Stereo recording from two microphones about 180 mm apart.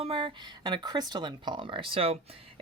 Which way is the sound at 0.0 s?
30° right (ahead or behind).